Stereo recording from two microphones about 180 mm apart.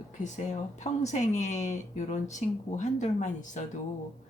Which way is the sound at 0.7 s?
40° left (ahead or behind).